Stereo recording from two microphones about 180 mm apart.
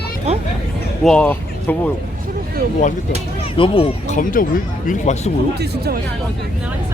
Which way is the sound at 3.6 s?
30° left (ahead or behind).